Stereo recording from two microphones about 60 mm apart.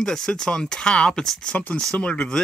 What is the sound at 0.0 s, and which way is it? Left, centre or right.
Speech, centre.